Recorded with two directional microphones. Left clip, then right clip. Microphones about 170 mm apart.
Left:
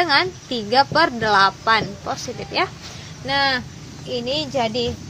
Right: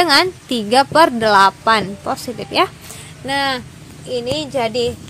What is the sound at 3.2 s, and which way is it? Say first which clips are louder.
Speech: right 1 dB; 40° right (ahead or behind).